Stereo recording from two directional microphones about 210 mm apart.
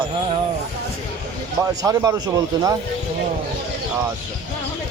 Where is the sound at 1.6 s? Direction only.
15° right (ahead or behind).